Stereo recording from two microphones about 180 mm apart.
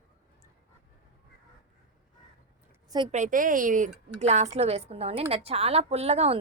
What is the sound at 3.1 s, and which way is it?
A woman's voice, 45° right (ahead or behind).